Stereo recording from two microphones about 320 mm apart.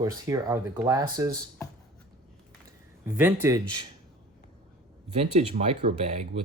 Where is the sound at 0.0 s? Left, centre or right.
Centre.